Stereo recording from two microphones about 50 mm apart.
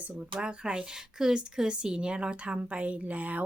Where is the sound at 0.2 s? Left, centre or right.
Right.